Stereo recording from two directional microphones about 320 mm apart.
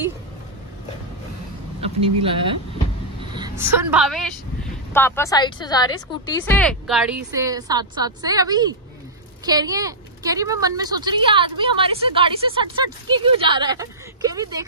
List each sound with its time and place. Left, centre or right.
2.0 s a woman's voice: centre
3.3 s vehicle: centre
3.7 s a woman's voice: centre